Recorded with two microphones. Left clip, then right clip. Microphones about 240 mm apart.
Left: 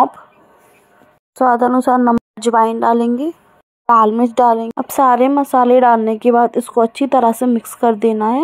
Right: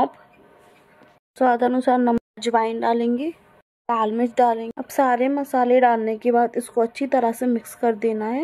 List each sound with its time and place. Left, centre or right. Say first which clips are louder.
1.3 s speech: left 6 dB; centre
1.6 s speech: left 6 dB; left
2.3 s a woman's voice: left 8 dB; centre